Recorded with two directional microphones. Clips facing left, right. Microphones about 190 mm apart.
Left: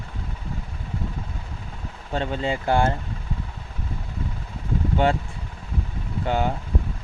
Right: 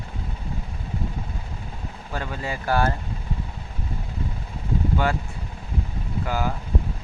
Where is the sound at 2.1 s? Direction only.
25° left (ahead or behind).